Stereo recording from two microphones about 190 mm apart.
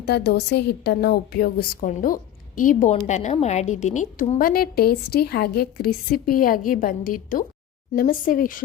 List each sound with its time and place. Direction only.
0.0 s a woman's voice: 60° left (ahead or behind)